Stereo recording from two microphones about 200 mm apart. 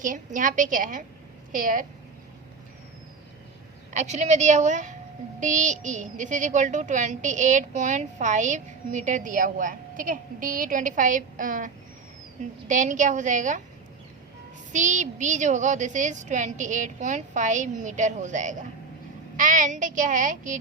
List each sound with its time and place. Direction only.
0.0 s a woman's voice: 40° right (ahead or behind)
3.9 s a woman's voice: 35° right (ahead or behind)
14.7 s a woman's voice: 40° right (ahead or behind)